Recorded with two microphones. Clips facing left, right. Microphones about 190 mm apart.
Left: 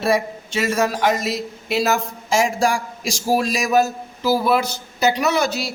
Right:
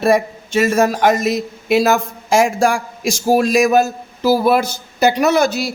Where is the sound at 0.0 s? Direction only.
50° right (ahead or behind).